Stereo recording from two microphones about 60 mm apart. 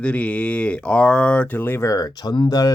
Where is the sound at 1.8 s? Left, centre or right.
Left.